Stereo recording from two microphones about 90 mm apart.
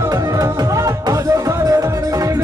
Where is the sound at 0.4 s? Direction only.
40° right (ahead or behind).